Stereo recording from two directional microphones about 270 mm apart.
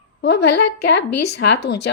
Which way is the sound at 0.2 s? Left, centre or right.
Left.